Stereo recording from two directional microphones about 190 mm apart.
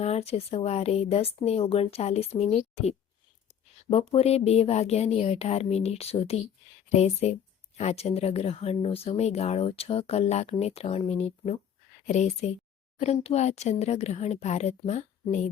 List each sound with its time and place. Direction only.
0.0 s speech: 35° left (ahead or behind)
3.8 s speech: 30° left (ahead or behind)